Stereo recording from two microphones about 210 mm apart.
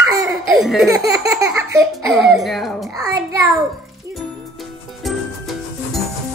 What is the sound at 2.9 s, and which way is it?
Baby laughter, 15° right (ahead or behind).